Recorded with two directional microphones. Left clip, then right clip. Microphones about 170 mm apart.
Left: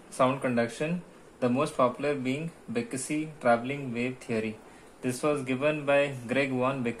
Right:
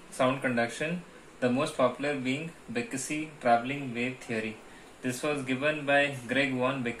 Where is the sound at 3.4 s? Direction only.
60° left (ahead or behind).